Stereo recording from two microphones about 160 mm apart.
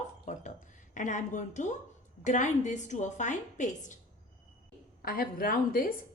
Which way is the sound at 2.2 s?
50° left (ahead or behind).